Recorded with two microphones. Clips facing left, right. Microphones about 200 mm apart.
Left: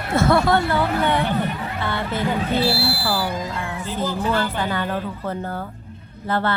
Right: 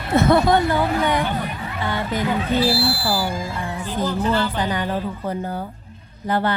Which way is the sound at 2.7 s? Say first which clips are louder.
Right 2 dB; 65° left (ahead or behind).